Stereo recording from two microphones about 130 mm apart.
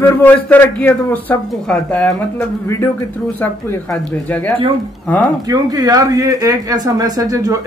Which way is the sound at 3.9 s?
10° left (ahead or behind).